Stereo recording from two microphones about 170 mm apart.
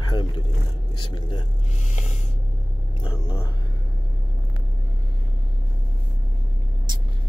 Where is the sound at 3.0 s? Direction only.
25° left (ahead or behind).